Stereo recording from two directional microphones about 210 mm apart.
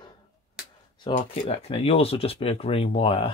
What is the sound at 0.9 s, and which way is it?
Speech, 25° left (ahead or behind).